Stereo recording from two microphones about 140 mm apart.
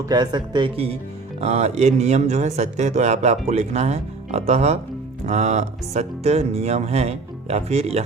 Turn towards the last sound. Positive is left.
turn(degrees=-50)  # may be behind; listen again after turning